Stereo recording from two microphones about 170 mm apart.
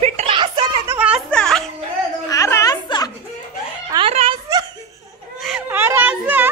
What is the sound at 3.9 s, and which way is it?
Speech, 35° right (ahead or behind).